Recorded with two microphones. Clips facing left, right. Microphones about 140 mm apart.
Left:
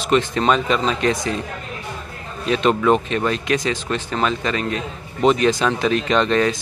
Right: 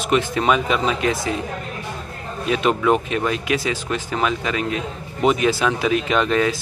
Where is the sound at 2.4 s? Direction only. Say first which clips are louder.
Left 2 dB; 10° right (ahead or behind).